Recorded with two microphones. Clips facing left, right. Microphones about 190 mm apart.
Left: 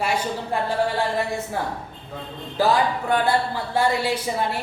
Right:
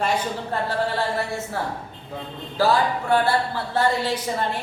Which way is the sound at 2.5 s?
15° left (ahead or behind).